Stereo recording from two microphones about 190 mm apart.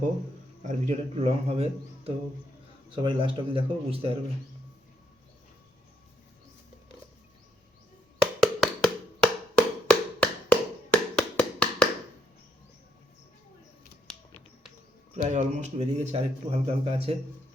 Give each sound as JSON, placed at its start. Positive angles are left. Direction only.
{"t": 0.6, "sound": "a man's voice", "side_deg": -35}
{"t": 2.9, "sound": "speech", "side_deg": -25}
{"t": 8.4, "sound": "tap", "side_deg": 0}
{"t": 15.1, "sound": "a man's voice", "side_deg": -35}